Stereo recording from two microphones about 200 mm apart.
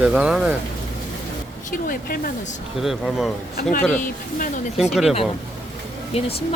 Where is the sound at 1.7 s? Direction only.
45° left (ahead or behind).